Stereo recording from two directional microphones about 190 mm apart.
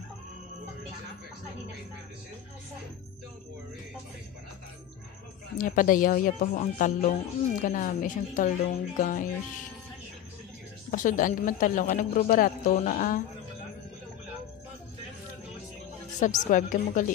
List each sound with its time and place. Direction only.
5.6 s speech: 45° left (ahead or behind)
10.9 s speech: 45° left (ahead or behind)
16.2 s speech: 40° left (ahead or behind)